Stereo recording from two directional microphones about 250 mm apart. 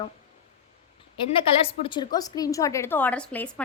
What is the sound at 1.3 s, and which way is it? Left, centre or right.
A woman's voice, left.